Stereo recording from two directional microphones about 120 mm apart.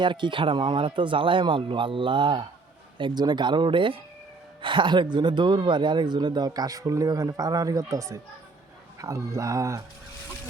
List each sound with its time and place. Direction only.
0.0 s a man's voice: 40° right (ahead or behind); by 9.8 s 25° right (ahead or behind)